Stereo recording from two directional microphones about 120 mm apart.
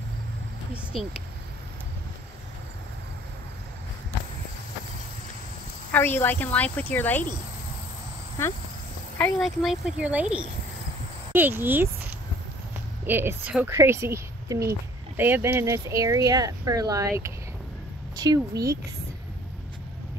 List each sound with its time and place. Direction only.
0.9 s speech: centre (ahead or behind)
5.9 s speech: 15° left (ahead or behind)
9.4 s speech: 5° right (ahead or behind)
13.0 s a woman's voice: 15° right (ahead or behind); by 18.6 s 35° right (ahead or behind)